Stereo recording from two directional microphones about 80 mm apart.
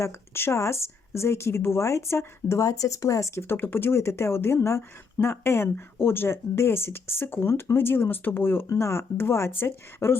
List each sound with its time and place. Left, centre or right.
0.0 s speech: left
3.4 s speech: left